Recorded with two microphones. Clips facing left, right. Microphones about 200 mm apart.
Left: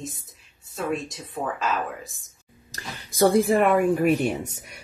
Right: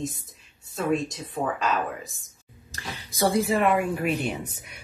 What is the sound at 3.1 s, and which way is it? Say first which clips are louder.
Speech: left 4 dB; 50° left (ahead or behind).